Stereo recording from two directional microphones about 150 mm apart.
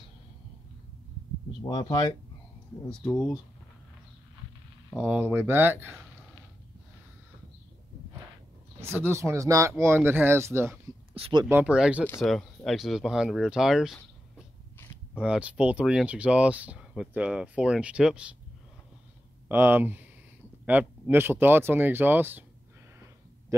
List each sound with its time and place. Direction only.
1.6 s speech: 25° left (ahead or behind)
2.9 s speech: 5° left (ahead or behind)
4.9 s speech: 5° right (ahead or behind)
8.8 s speech: 15° right (ahead or behind)
11.1 s speech: 35° right (ahead or behind)
11.4 s speech: 10° right (ahead or behind)
15.1 s speech: 10° right (ahead or behind)
19.5 s speech: 15° right (ahead or behind)